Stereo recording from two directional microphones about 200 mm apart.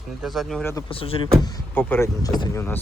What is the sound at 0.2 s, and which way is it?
Speech, centre (ahead or behind).